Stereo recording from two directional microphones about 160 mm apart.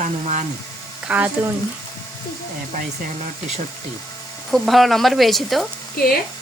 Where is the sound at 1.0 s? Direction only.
10° right (ahead or behind).